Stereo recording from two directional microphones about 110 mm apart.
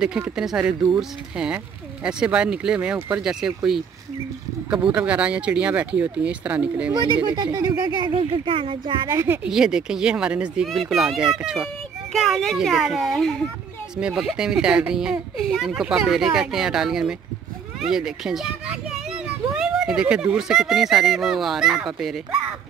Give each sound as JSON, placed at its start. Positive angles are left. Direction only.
{"t": 0.0, "sound": "speech", "side_deg": -5}
{"t": 4.9, "sound": "speech", "side_deg": -10}
{"t": 6.9, "sound": "speech", "side_deg": -45}
{"t": 8.1, "sound": "speech", "side_deg": -55}
{"t": 9.1, "sound": "speech", "side_deg": -25}
{"t": 9.4, "sound": "speech", "side_deg": -5}